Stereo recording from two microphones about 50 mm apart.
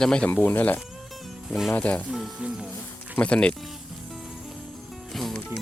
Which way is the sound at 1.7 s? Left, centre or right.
Left.